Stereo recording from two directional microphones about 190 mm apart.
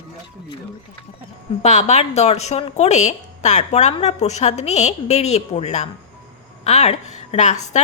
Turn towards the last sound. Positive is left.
turn(degrees=40)  # may be behind; listen again after turning